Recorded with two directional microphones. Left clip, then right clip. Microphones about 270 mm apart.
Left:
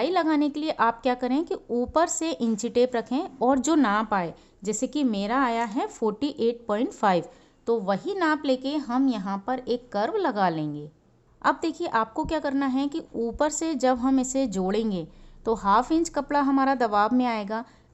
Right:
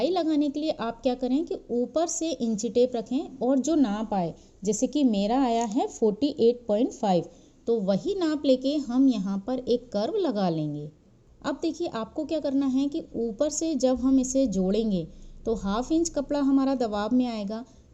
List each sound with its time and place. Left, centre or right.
0.0 s a woman's voice: centre
13.1 s a woman's voice: left
13.4 s a woman's voice: centre